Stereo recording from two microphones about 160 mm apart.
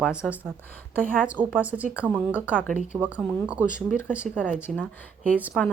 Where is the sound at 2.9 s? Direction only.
10° right (ahead or behind).